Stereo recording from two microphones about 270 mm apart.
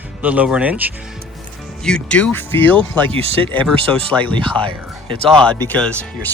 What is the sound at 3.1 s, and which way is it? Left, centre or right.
Speech, right.